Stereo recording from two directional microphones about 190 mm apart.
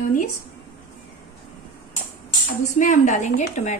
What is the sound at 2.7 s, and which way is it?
A woman's voice, 40° left (ahead or behind).